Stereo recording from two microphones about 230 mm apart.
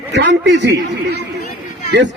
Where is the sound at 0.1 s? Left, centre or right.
Right.